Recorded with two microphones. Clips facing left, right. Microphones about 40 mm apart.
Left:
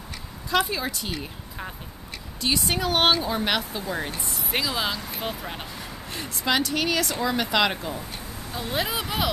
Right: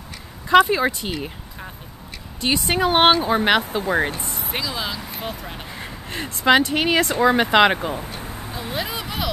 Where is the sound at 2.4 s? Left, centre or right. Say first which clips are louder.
Right 5 dB; right.